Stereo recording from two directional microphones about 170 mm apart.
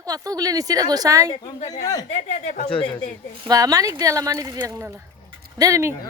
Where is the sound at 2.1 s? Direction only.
45° left (ahead or behind).